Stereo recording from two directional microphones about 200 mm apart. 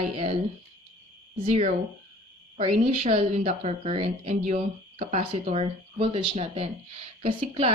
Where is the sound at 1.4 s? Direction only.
35° right (ahead or behind).